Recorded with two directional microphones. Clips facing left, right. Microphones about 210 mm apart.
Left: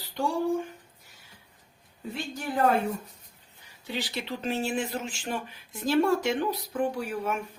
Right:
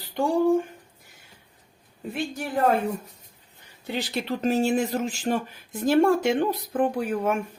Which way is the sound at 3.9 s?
50° right (ahead or behind).